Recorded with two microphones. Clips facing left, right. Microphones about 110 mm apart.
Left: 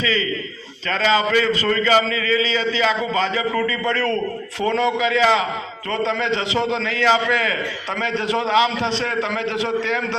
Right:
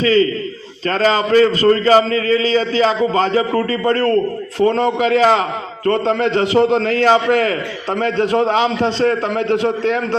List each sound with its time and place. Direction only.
0.0 s a man's voice: 45° right (ahead or behind)